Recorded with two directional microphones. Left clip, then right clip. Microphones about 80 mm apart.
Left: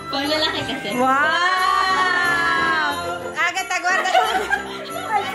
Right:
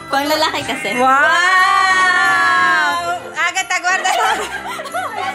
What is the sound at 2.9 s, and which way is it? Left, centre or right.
Music, right.